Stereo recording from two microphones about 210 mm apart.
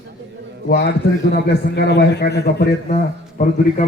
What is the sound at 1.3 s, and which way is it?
A man's voice, 55° left (ahead or behind).